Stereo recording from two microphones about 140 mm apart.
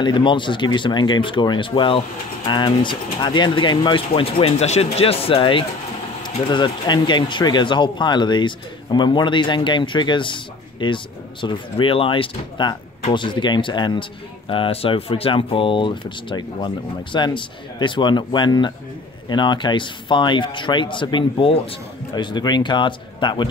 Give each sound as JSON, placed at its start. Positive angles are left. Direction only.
{"t": 0.0, "sound": "speech", "side_deg": 35}